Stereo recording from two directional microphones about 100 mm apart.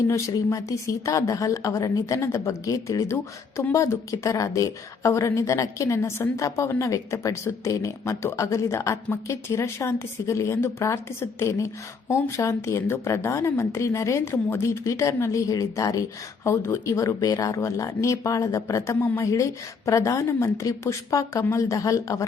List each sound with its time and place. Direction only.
0.1 s speech: 35° left (ahead or behind)